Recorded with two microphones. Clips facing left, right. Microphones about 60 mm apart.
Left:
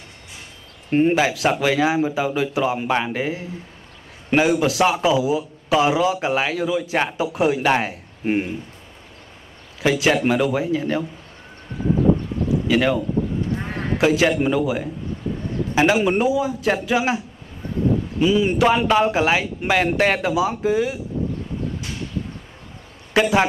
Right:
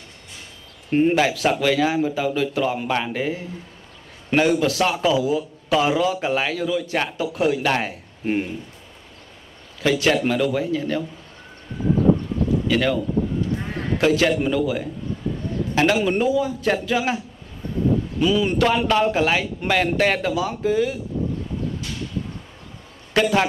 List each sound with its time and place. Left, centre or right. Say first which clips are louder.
0.8 s a man's voice: left 1 dB; centre
9.8 s a man's voice: left 1 dB; centre
12.6 s speech: left 4 dB; centre
13.7 s a sound: left 1 dB; left
13.9 s a man's voice: left 1 dB; centre
18.2 s a man's voice: left 2 dB; centre
23.1 s a man's voice: left 1 dB; centre